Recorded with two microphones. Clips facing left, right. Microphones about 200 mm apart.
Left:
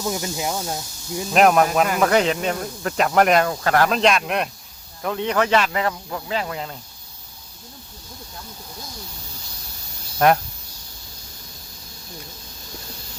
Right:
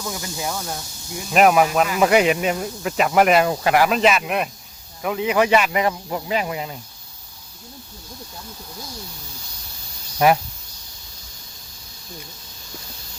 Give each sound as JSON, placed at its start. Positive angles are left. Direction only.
{"t": 0.0, "sound": "speech", "side_deg": 20}
{"t": 1.3, "sound": "speech", "side_deg": -5}
{"t": 10.2, "sound": "speech", "side_deg": -5}